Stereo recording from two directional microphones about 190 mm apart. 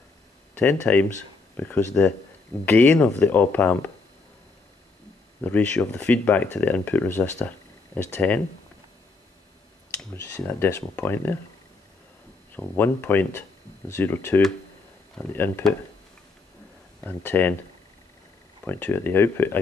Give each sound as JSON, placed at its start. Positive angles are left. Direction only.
{"t": 0.6, "sound": "speech", "side_deg": 10}
{"t": 5.4, "sound": "speech", "side_deg": 10}
{"t": 9.9, "sound": "speech", "side_deg": 10}
{"t": 12.5, "sound": "speech", "side_deg": 10}
{"t": 17.0, "sound": "speech", "side_deg": 10}
{"t": 18.6, "sound": "speech", "side_deg": 10}